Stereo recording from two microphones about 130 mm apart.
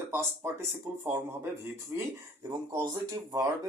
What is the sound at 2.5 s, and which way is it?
Speech, 30° right (ahead or behind).